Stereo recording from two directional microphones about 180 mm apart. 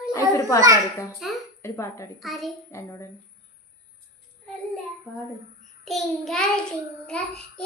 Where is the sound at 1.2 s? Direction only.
Centre (ahead or behind).